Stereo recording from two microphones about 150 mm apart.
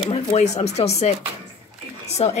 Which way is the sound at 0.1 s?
50° left (ahead or behind).